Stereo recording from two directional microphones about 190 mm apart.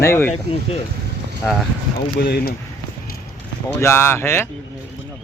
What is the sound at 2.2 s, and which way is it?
Speech, 50° left (ahead or behind).